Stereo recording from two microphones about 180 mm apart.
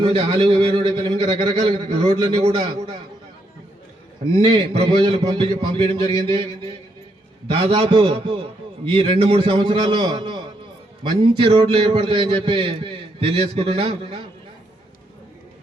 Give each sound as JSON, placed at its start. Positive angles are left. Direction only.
{"t": 0.0, "sound": "a man's voice", "side_deg": -30}
{"t": 4.4, "sound": "a man's voice", "side_deg": -30}